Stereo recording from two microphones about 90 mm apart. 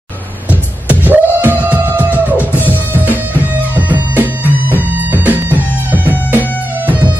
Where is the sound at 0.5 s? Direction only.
20° right (ahead or behind).